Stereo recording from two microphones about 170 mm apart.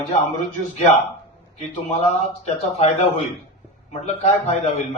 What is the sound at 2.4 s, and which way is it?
A man's voice, 40° left (ahead or behind).